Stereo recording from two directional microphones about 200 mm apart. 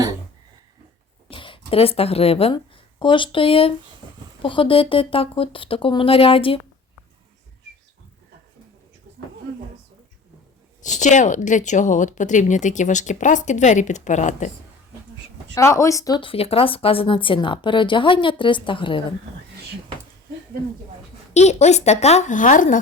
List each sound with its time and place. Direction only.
1.3 s speech: 25° left (ahead or behind)
10.8 s speech: 40° left (ahead or behind)
15.5 s speech: 15° left (ahead or behind)
21.3 s speech: 35° left (ahead or behind)